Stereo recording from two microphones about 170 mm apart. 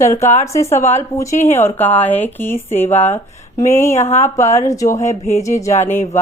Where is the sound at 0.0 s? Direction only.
15° left (ahead or behind).